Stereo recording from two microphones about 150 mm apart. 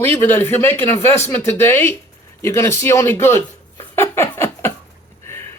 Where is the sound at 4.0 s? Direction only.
15° left (ahead or behind).